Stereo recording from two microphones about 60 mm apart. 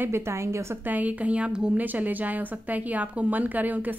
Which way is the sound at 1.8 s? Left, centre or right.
Right.